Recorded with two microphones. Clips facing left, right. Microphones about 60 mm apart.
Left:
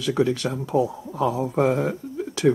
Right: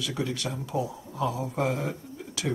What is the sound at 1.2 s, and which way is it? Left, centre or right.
Speech, left.